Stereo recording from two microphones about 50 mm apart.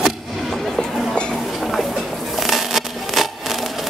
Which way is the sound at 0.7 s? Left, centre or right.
Centre.